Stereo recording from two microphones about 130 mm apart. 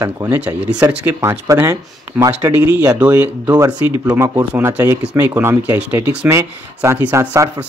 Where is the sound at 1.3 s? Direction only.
25° right (ahead or behind).